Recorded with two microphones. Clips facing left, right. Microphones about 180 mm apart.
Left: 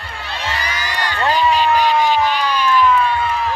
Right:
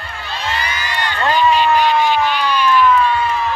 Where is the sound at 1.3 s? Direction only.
40° left (ahead or behind).